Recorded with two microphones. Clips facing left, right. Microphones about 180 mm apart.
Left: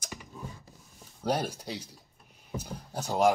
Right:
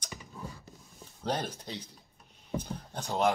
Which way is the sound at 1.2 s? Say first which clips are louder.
Left 3 dB; 10° left (ahead or behind).